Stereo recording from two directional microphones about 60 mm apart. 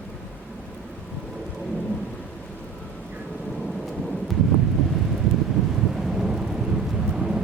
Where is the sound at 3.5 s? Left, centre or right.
Centre.